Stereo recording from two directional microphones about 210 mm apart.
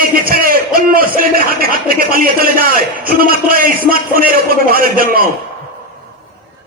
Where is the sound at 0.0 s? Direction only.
45° right (ahead or behind).